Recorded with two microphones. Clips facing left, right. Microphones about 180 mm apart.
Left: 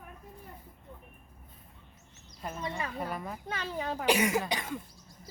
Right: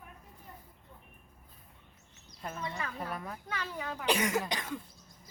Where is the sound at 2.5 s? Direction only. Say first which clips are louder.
Left 3 dB; 25° left (ahead or behind).